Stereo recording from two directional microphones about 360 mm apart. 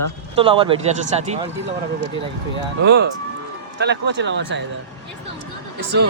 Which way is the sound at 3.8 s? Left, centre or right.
Right.